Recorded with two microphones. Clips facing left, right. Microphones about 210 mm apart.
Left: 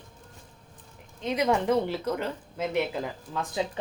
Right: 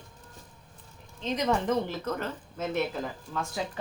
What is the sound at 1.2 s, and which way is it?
Speech, 10° left (ahead or behind).